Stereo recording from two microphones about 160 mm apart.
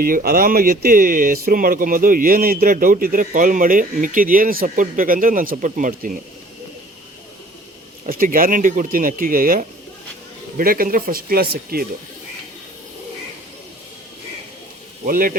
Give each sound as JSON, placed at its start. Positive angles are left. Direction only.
{"t": 0.0, "sound": "speech", "side_deg": -65}
{"t": 8.0, "sound": "speech", "side_deg": -60}
{"t": 15.0, "sound": "speech", "side_deg": -60}